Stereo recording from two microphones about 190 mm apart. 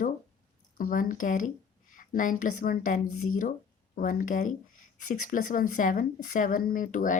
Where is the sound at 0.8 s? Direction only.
45° left (ahead or behind).